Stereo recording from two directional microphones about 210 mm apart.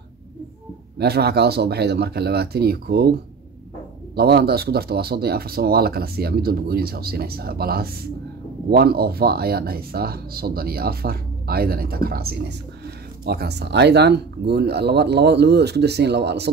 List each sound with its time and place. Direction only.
0.9 s speech: 50° right (ahead or behind)